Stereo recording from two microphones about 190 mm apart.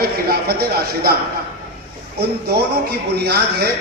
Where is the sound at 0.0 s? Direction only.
55° right (ahead or behind).